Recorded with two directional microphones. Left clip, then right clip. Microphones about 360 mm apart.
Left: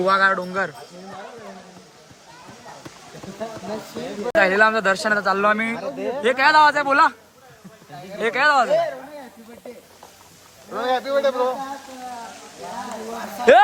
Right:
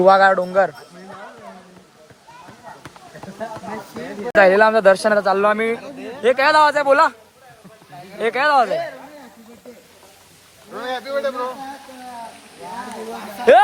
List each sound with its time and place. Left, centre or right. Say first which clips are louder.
0.0 s speech: right 6 dB; centre
4.3 s speech: right 4 dB; centre
5.7 s speech: left 3 dB; left
6.2 s speech: right 1 dB; centre
8.2 s speech: right 2 dB; centre
10.7 s a man's voice: left 4 dB; left